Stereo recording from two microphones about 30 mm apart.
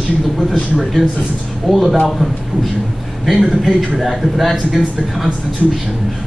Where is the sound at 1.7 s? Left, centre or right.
Centre.